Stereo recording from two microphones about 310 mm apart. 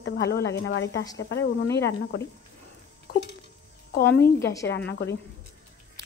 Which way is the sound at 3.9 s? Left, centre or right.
Left.